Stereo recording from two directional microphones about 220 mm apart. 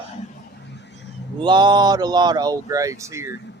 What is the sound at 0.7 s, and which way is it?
Vehicle, 50° left (ahead or behind).